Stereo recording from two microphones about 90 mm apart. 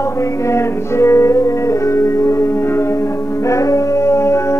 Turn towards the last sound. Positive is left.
turn(degrees=30)  # may be behind; listen again after turning